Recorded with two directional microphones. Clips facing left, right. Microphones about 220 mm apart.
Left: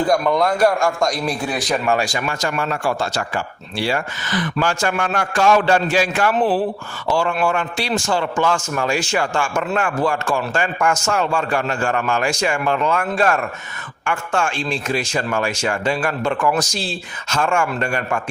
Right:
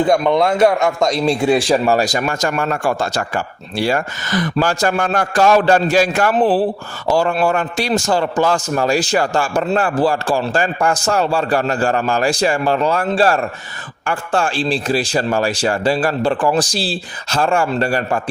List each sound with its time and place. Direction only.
0.0 s a man's voice: 25° right (ahead or behind)